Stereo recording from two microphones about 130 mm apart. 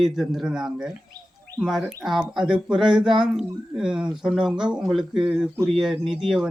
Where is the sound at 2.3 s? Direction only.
5° right (ahead or behind).